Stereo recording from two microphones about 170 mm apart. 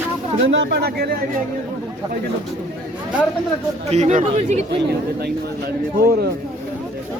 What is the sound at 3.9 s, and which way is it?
Speech, 45° right (ahead or behind).